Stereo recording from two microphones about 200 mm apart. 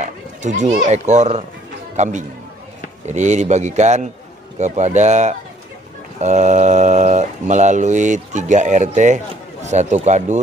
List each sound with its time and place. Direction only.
0.0 s a man's voice: 35° right (ahead or behind)